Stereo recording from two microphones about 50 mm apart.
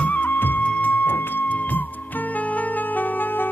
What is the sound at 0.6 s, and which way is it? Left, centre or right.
Music, left.